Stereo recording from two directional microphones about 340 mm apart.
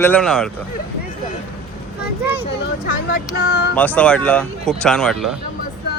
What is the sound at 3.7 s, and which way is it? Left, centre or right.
Speech, centre.